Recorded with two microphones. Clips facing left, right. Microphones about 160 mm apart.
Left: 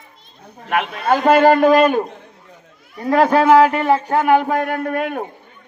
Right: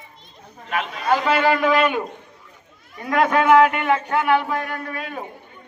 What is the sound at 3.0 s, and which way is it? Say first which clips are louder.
Speech: left 5 dB; 35° left (ahead or behind).